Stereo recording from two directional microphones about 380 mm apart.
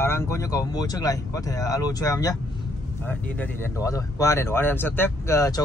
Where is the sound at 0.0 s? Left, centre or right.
Centre.